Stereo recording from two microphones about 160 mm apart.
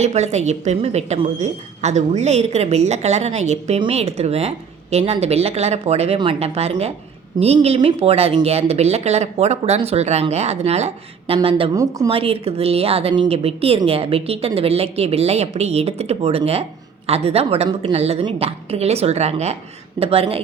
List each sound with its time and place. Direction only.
0.0 s a woman's voice: 45° right (ahead or behind)
11.7 s a woman's voice: 20° right (ahead or behind)
12.0 s a woman's voice: 35° right (ahead or behind)